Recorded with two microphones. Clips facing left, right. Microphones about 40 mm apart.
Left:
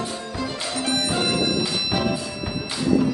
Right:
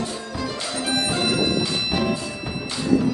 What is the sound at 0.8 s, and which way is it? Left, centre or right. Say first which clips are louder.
Music: even; centre.